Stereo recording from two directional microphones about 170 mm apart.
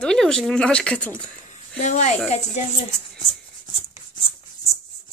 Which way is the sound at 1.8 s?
45° left (ahead or behind).